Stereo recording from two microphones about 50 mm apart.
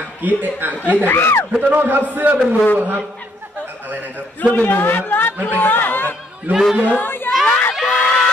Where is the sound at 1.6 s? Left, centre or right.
Right.